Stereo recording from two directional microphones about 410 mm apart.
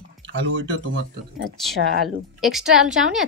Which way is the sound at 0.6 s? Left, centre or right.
Right.